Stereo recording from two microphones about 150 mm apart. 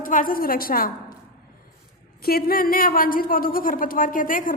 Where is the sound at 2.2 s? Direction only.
85° left.